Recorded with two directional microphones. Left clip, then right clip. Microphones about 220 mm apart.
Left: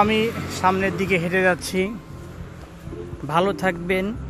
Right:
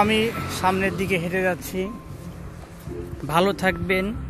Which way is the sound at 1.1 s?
10° left (ahead or behind).